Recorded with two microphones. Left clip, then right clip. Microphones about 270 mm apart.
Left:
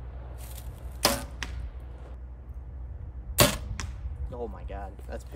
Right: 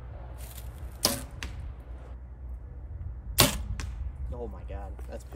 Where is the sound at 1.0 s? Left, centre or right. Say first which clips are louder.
Left 3 dB; centre.